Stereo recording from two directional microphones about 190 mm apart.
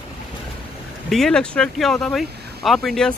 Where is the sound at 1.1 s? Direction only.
5° left (ahead or behind).